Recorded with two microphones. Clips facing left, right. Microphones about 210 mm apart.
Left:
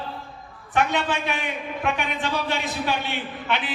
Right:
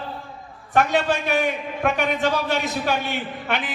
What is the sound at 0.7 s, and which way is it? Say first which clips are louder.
A man's voice: right 3 dB; 40° right (ahead or behind).